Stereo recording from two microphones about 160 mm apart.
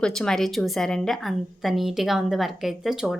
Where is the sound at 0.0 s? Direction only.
5° left (ahead or behind).